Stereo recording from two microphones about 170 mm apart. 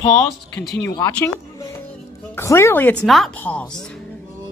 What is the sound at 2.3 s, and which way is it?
Speech, 15° left (ahead or behind).